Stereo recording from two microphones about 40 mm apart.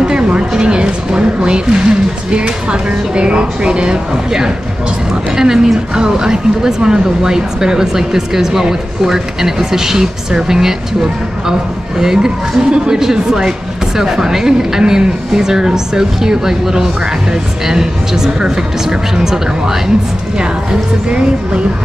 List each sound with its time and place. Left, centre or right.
0.0 s a woman's voice: right